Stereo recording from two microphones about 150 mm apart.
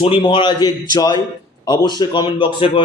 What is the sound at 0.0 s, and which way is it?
Speech, 35° left (ahead or behind).